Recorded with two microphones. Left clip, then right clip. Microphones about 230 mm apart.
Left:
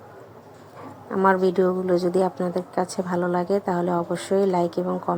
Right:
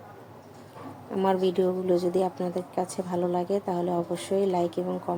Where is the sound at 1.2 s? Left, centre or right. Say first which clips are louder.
Left 5 dB; centre.